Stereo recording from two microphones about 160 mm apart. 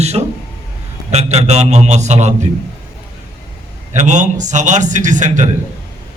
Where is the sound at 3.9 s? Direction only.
50° right (ahead or behind).